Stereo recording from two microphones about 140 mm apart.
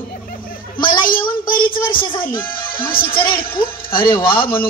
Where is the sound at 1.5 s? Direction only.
90° left.